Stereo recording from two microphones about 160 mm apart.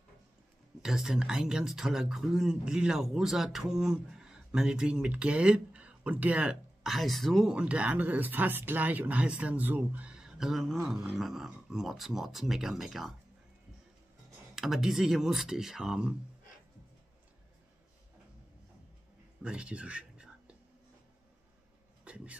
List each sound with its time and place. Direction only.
0.8 s speech: 5° right (ahead or behind)
14.5 s speech: centre (ahead or behind)
19.4 s whispering: 5° right (ahead or behind)
22.0 s speech: 10° right (ahead or behind)